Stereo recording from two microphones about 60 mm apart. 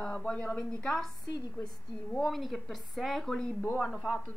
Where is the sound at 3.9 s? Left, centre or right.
Centre.